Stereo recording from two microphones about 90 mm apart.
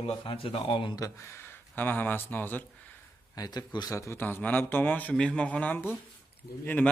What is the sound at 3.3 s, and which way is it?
Speech, 50° left (ahead or behind).